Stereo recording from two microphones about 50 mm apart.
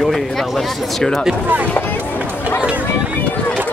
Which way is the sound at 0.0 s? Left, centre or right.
Centre.